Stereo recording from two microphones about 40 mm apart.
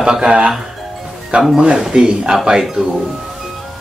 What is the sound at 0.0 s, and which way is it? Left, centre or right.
Speech, right.